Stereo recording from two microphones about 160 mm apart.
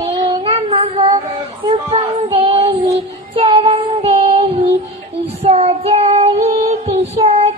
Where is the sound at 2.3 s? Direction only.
35° right (ahead or behind).